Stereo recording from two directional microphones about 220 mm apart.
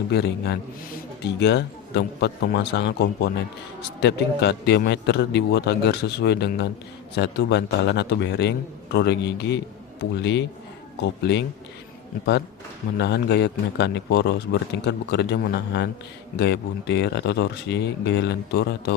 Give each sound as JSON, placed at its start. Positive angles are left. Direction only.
{"t": 0.1, "sound": "a man's voice", "side_deg": 50}
{"t": 13.0, "sound": "a man's voice", "side_deg": 50}